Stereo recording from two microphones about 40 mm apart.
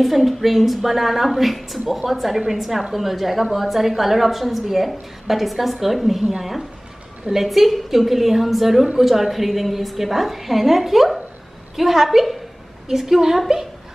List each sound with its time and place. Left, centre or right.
0.0 s a woman's voice: centre